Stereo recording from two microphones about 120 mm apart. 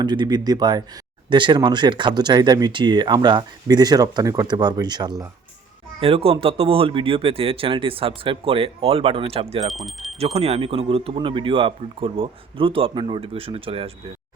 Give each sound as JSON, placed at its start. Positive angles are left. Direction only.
{"t": 0.0, "sound": "speech", "side_deg": -35}
{"t": 6.0, "sound": "speech", "side_deg": -50}
{"t": 9.7, "sound": "speech", "side_deg": 0}
{"t": 10.2, "sound": "speech", "side_deg": -60}